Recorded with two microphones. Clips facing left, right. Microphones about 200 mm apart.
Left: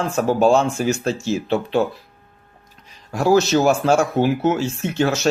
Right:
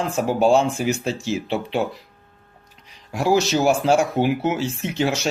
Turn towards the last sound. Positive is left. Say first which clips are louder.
# left 3 dB
turn(degrees=-15)  # may be behind; listen again after turning